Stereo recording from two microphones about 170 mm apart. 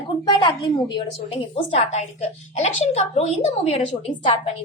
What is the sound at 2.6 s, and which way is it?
A woman's voice, 40° left (ahead or behind).